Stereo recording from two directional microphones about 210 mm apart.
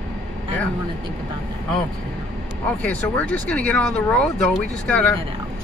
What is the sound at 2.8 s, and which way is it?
Speech, 5° left (ahead or behind).